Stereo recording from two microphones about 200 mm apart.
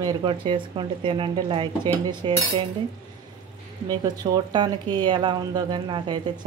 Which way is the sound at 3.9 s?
20° right (ahead or behind).